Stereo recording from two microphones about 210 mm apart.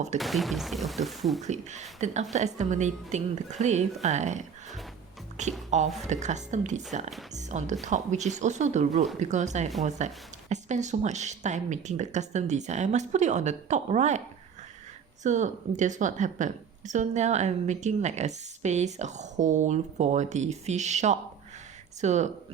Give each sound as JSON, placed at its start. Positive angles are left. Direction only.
{"t": 0.2, "sound": "speech", "side_deg": 0}
{"t": 1.4, "sound": "speech", "side_deg": -35}
{"t": 15.2, "sound": "speech", "side_deg": -35}